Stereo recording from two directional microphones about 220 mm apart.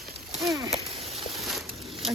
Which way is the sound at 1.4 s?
Centre (ahead or behind).